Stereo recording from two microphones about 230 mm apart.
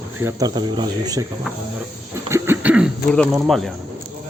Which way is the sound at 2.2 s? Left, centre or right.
Centre.